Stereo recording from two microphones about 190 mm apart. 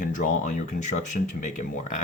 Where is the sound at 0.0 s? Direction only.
45° left (ahead or behind).